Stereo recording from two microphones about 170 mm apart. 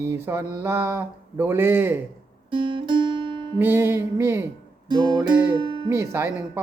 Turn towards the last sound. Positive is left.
turn(degrees=-15)  # may be behind; listen again after turning